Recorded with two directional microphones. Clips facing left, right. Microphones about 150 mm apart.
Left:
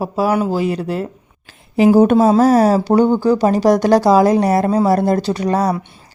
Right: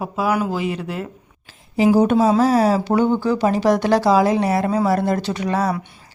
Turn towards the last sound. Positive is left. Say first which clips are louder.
# left 4 dB
turn(degrees=40)  # may be behind; listen again after turning